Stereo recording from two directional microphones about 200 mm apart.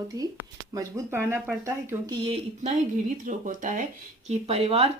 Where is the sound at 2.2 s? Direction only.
30° right (ahead or behind).